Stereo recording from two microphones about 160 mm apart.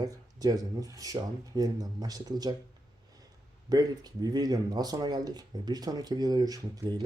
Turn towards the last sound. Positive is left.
turn(degrees=-25)  # may be behind; listen again after turning